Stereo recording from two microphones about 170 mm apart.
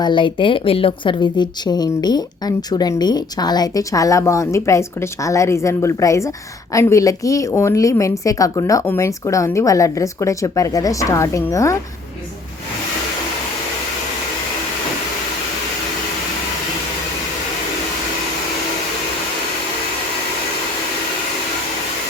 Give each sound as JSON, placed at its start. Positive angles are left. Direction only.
{"t": 0.0, "sound": "a woman's voice", "side_deg": 30}